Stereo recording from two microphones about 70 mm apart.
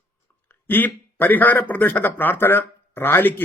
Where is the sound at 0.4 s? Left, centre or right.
Left.